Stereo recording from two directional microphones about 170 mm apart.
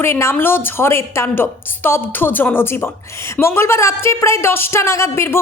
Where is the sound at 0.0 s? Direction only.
15° left (ahead or behind).